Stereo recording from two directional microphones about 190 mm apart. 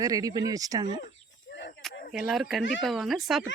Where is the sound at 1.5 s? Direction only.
65° left (ahead or behind).